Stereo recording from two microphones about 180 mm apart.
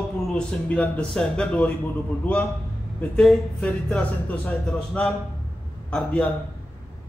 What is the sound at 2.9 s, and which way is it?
Speech, 5° left (ahead or behind).